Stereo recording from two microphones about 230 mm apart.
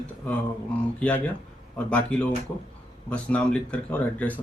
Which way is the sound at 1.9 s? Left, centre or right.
Centre.